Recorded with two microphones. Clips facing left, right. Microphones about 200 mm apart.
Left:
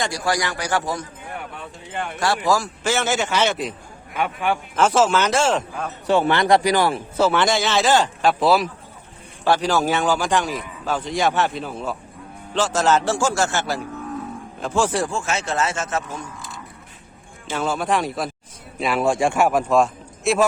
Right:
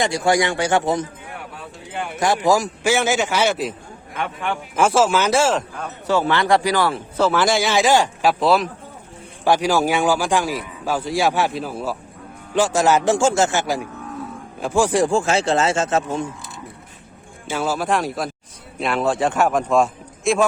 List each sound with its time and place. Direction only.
0.0 s speech: 25° right (ahead or behind)
1.9 s a man's voice: 5° right (ahead or behind)
2.1 s a man's voice: 20° right (ahead or behind); by 5.9 s centre (ahead or behind)
6.1 s a man's voice: 20° left (ahead or behind)
7.3 s a man's voice: 5° right (ahead or behind)
9.4 s a man's voice: 10° right (ahead or behind)
13.1 s a man's voice: 25° right (ahead or behind)
15.1 s speech: 30° right (ahead or behind)
17.5 s speech: 5° right (ahead or behind)
19.0 s a man's voice: 10° left (ahead or behind)